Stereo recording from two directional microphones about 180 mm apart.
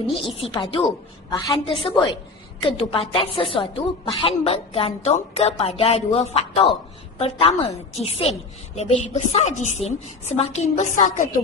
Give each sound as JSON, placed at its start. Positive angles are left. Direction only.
{"t": 0.1, "sound": "a woman's voice", "side_deg": 30}